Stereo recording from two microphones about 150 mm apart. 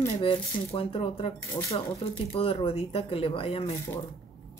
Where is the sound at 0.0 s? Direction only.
35° left (ahead or behind).